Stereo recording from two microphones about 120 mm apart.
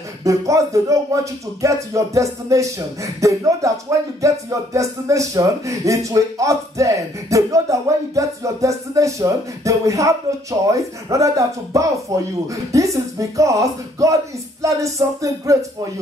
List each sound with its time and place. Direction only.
0.2 s speech: 25° right (ahead or behind)